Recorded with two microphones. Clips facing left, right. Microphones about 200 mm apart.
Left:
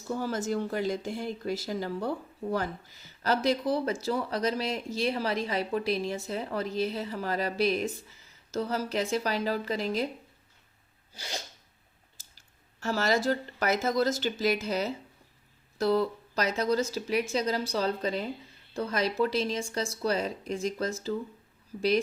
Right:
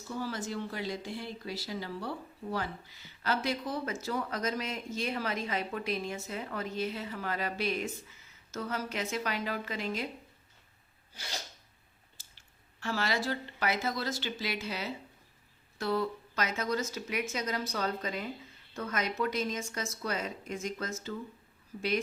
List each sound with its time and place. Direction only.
0.1 s speech: 45° left (ahead or behind)
12.8 s speech: 40° left (ahead or behind)